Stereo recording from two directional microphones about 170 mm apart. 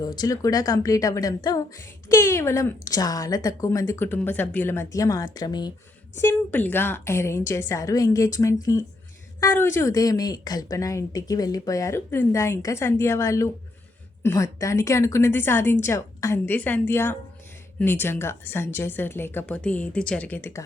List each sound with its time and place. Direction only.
0.0 s a woman's voice: 25° left (ahead or behind)
6.1 s a woman's voice: 10° left (ahead or behind)